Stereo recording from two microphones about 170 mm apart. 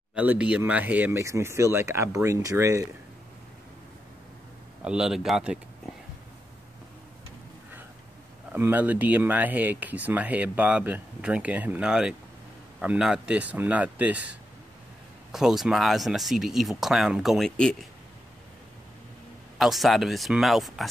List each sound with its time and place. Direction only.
0.1 s speech: 5° right (ahead or behind)
4.8 s speech: 5° right (ahead or behind)
8.5 s speech: 10° right (ahead or behind)
15.3 s speech: centre (ahead or behind)
19.6 s speech: centre (ahead or behind)